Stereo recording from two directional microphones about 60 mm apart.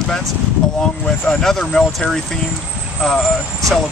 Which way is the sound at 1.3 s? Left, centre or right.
Centre.